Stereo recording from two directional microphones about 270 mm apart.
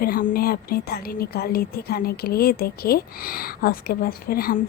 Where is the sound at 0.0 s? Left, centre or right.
Left.